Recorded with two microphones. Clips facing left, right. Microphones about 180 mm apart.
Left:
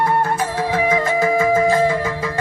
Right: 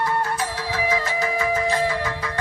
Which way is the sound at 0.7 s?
50° left (ahead or behind).